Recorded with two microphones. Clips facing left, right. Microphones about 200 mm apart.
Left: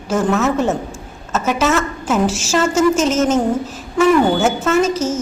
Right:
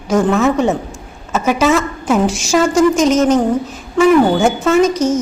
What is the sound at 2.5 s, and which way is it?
Speech, 10° right (ahead or behind).